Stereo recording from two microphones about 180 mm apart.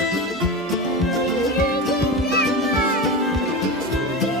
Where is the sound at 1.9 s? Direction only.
60° left (ahead or behind).